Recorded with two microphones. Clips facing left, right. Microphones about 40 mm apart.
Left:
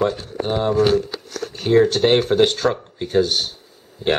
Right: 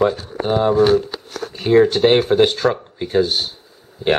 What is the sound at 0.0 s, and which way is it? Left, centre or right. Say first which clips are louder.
Speech: right 3 dB; centre.